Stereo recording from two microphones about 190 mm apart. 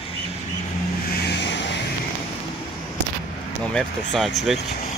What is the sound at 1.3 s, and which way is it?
Vehicle, 65° left (ahead or behind).